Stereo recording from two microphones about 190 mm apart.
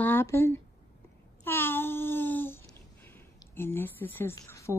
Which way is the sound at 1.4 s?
10° left (ahead or behind).